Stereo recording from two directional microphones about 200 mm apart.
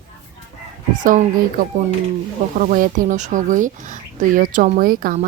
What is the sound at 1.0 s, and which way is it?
Speech, 40° right (ahead or behind).